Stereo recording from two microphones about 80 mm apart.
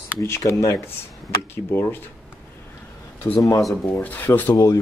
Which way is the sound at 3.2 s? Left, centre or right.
Left.